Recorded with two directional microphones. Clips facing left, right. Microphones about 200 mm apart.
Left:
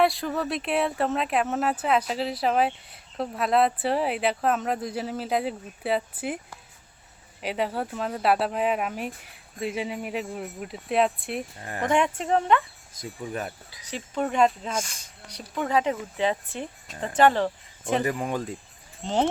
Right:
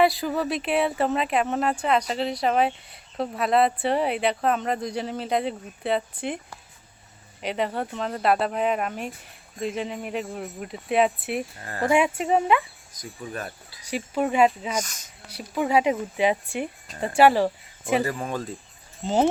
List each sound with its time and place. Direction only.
0.0 s speech: centre (ahead or behind)
7.4 s speech: 5° left (ahead or behind)
12.9 s speech: 30° left (ahead or behind)
13.4 s speech: 15° left (ahead or behind)
13.8 s speech: 10° right (ahead or behind)
14.8 s speech: 30° left (ahead or behind)
15.3 s speech: 5° right (ahead or behind)
18.0 s speech: 15° left (ahead or behind)
19.0 s speech: 5° right (ahead or behind)